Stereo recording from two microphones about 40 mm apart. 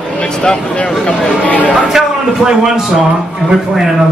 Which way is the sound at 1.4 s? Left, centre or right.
Left.